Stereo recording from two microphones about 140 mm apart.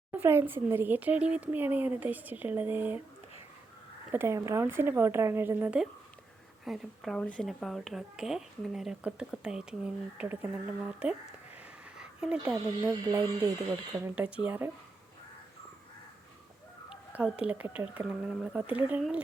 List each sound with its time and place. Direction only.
0.1 s speech: 15° right (ahead or behind)
4.1 s speech: 20° right (ahead or behind)
6.7 s a child's voice: centre (ahead or behind)
11.5 s a sound: 5° right (ahead or behind)
12.8 s speech: 25° right (ahead or behind)
14.0 s speech: 10° right (ahead or behind)
16.9 s speech: 5° right (ahead or behind)